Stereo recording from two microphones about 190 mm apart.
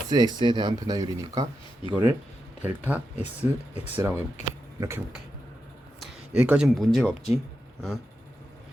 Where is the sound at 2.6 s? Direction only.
10° right (ahead or behind).